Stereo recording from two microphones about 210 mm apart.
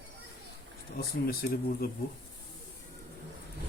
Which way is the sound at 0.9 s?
45° left (ahead or behind).